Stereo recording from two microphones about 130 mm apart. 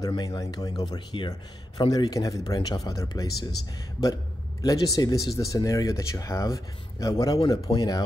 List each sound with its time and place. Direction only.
0.0 s a man's voice: 30° left (ahead or behind)